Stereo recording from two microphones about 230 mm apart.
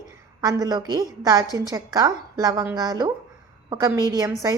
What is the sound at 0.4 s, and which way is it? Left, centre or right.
A woman's voice, centre.